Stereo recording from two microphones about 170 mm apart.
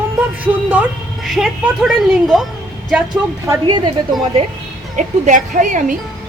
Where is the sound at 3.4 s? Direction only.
20° right (ahead or behind).